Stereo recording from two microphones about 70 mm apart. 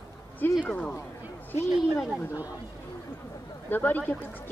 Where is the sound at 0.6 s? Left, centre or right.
Centre.